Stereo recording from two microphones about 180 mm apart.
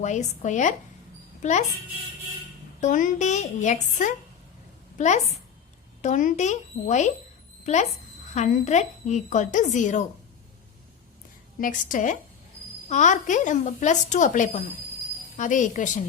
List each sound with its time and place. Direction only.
0.0 s a woman's voice: 40° left (ahead or behind)
2.8 s a woman's voice: 45° left (ahead or behind)
11.6 s a woman's voice: 45° left (ahead or behind)